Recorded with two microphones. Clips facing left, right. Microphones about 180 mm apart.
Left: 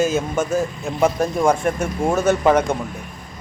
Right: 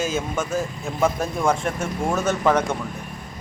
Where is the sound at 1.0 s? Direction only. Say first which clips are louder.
Left 4 dB; 15° left (ahead or behind).